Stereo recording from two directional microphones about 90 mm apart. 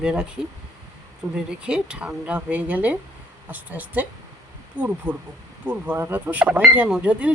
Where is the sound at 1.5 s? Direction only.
10° right (ahead or behind).